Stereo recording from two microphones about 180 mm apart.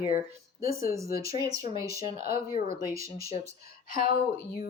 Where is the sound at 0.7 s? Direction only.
55° left (ahead or behind).